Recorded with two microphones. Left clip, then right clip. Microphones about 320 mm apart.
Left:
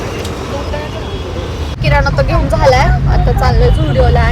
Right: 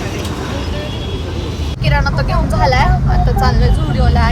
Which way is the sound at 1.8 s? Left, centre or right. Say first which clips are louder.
Left 5 dB; centre.